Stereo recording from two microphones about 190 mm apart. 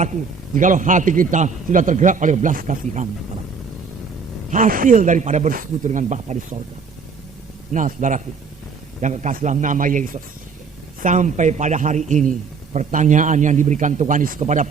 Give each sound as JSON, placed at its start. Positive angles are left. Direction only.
{"t": 0.5, "sound": "a man's voice", "side_deg": -45}
{"t": 4.5, "sound": "speech", "side_deg": -45}
{"t": 7.7, "sound": "speech", "side_deg": -40}